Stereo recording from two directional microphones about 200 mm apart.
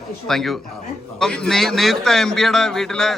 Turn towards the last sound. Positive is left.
turn(degrees=0)  # may be behind; listen again after turning